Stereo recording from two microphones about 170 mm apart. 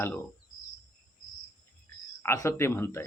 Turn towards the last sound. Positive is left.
turn(degrees=15)  # may be behind; listen again after turning